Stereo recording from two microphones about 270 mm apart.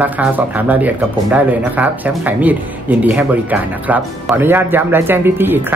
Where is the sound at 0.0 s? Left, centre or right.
Centre.